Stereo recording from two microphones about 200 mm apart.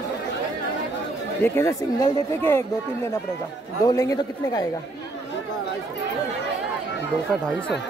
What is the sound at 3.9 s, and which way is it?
Speech, 15° left (ahead or behind).